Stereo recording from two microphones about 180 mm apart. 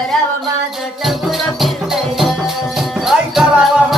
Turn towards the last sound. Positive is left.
turn(degrees=0)  # may be behind; listen again after turning